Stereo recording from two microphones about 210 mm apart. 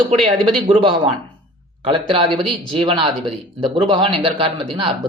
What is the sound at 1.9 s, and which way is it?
Speech, 25° right (ahead or behind).